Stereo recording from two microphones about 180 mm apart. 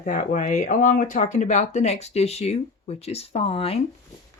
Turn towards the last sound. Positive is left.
turn(degrees=30)  # may be behind; listen again after turning